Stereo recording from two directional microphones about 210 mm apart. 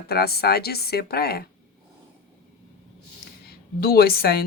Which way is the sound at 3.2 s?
45° left (ahead or behind).